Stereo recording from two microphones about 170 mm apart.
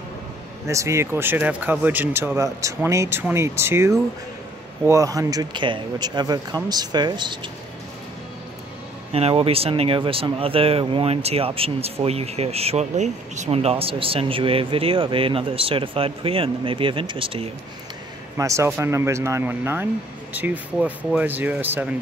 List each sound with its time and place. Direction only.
0.7 s speech: 15° right (ahead or behind)
9.1 s speech: 35° right (ahead or behind)
18.4 s speech: 20° right (ahead or behind)